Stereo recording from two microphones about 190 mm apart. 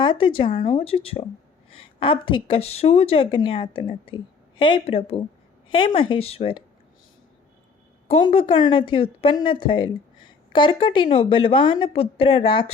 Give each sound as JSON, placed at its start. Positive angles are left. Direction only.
{"t": 0.0, "sound": "a woman's voice", "side_deg": 25}
{"t": 8.0, "sound": "a woman's voice", "side_deg": 30}